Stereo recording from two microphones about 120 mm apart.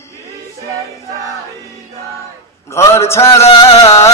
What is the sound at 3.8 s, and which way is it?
Music, 25° left (ahead or behind).